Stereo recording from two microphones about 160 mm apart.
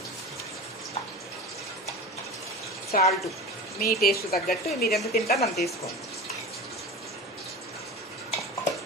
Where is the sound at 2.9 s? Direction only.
60° left (ahead or behind).